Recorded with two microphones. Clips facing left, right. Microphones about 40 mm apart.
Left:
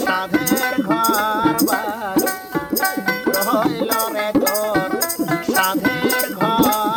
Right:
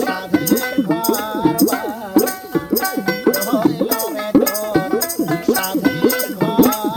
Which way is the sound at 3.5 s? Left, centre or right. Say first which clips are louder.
Even; left.